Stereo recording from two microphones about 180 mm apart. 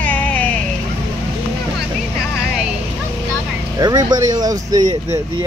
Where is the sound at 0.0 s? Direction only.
10° left (ahead or behind).